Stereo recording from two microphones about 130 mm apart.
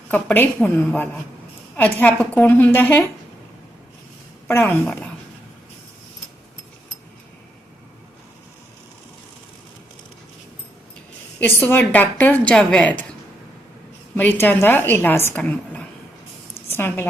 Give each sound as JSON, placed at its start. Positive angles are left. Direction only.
{"t": 0.1, "sound": "a woman's voice", "side_deg": 15}
{"t": 4.4, "sound": "a woman's voice", "side_deg": 15}
{"t": 11.3, "sound": "a woman's voice", "side_deg": 15}
{"t": 14.2, "sound": "a woman's voice", "side_deg": 15}